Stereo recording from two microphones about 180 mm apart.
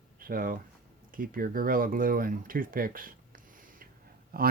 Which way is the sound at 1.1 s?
50° right (ahead or behind).